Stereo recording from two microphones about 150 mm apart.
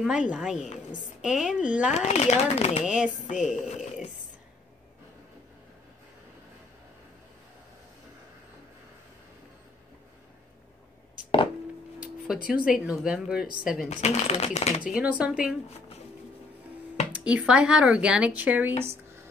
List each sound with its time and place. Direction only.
0.0 s a woman's voice: 5° right (ahead or behind)
2.0 s speech: 45° left (ahead or behind)
2.8 s a woman's voice: 5° right (ahead or behind)
12.4 s speech: 5° right (ahead or behind)
13.8 s speech: 45° left (ahead or behind)
14.9 s speech: 10° right (ahead or behind)
17.1 s speech: 10° right (ahead or behind)